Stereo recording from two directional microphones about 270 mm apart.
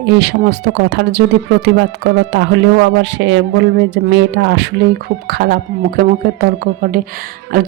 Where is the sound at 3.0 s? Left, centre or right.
Right.